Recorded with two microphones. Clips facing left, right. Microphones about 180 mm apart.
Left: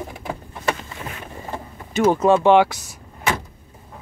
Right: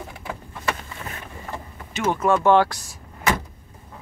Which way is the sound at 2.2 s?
20° left (ahead or behind).